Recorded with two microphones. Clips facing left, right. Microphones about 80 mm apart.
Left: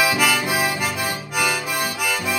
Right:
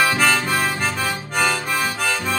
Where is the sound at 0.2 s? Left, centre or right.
Centre.